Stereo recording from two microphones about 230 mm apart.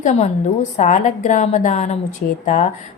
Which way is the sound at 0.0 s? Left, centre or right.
Left.